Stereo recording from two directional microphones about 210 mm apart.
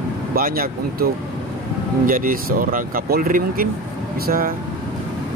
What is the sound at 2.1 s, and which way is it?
Speech, 40° right (ahead or behind).